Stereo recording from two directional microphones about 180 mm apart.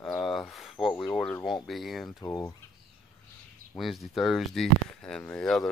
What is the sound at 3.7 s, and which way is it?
Speech, centre (ahead or behind).